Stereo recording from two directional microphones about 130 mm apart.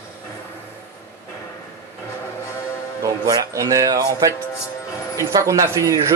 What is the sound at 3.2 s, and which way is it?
Speech, 25° right (ahead or behind).